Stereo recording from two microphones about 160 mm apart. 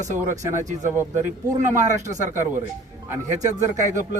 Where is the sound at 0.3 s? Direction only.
50° right (ahead or behind).